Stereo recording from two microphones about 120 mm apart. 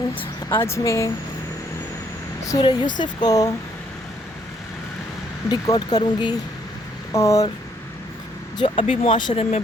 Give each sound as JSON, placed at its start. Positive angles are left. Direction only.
{"t": 0.6, "sound": "speech", "side_deg": 25}
{"t": 2.5, "sound": "speech", "side_deg": 35}
{"t": 5.6, "sound": "speech", "side_deg": 30}
{"t": 7.1, "sound": "speech", "side_deg": 25}
{"t": 8.5, "sound": "speech", "side_deg": 45}